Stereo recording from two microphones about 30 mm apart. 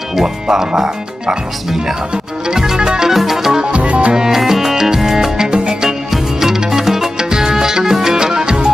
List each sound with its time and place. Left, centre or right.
0.1 s speech: centre
2.4 s music: centre
2.8 s music: right
3.1 s music: centre
3.7 s music: right
4.3 s music: centre
5.5 s music: right
6.7 s music: centre